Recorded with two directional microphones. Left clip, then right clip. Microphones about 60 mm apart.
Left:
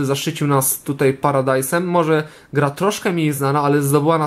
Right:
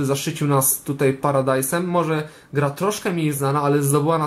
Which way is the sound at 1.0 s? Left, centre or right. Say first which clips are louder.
Left 3 dB; left.